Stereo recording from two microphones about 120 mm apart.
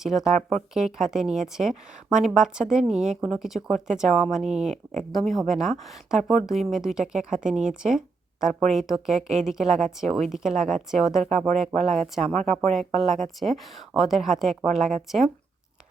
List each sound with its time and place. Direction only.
0.0 s speech: 5° right (ahead or behind)
11.2 s speech: 70° right (ahead or behind)
11.4 s speech: centre (ahead or behind)